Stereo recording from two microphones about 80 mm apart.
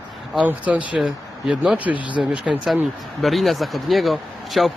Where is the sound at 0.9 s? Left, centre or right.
Centre.